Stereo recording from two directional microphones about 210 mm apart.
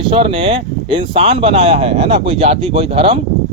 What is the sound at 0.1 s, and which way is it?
Speech, 25° right (ahead or behind).